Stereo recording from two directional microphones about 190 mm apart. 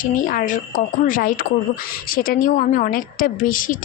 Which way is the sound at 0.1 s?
45° left (ahead or behind).